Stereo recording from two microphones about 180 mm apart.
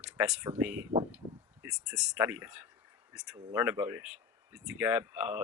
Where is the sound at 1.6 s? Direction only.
5° right (ahead or behind).